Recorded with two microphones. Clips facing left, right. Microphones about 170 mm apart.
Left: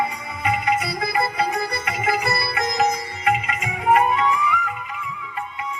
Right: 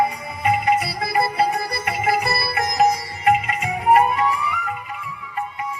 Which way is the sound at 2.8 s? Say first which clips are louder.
Right 5 dB; 40° right (ahead or behind).